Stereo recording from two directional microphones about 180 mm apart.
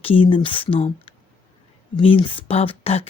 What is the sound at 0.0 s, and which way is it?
Speech, 30° left (ahead or behind).